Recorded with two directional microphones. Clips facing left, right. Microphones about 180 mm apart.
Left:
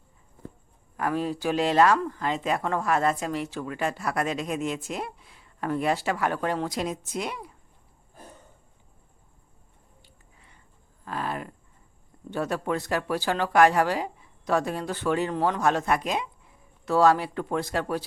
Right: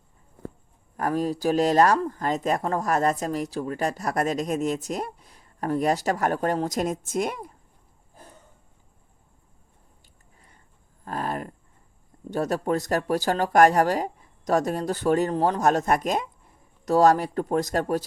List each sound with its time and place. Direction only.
0.9 s speech: 40° right (ahead or behind)
10.0 s a sound: 45° right (ahead or behind)
12.3 s speech: 40° right (ahead or behind)